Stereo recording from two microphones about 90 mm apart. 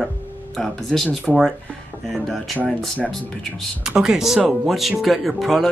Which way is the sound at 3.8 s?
10° right (ahead or behind).